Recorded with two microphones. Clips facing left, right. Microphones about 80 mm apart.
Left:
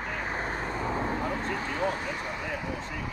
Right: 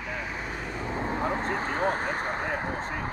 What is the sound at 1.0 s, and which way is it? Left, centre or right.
Vehicle, right.